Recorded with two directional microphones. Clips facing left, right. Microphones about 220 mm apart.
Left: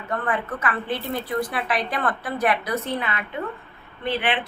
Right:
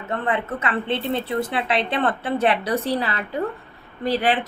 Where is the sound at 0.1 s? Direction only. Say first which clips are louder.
Right 2 dB; 25° right (ahead or behind).